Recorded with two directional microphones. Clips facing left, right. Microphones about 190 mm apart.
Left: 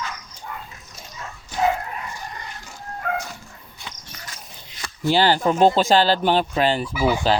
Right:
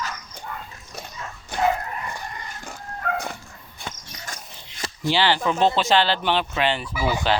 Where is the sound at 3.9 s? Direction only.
45° right (ahead or behind).